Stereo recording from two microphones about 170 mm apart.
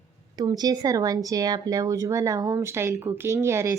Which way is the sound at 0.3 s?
25° right (ahead or behind).